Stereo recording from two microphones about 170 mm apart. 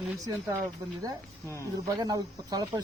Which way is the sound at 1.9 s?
25° right (ahead or behind).